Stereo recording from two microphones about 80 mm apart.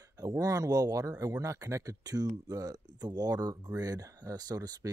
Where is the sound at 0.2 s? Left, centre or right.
Right.